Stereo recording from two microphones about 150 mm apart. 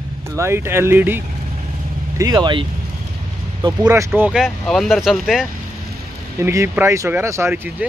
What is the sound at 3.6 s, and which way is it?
Speech, 20° right (ahead or behind).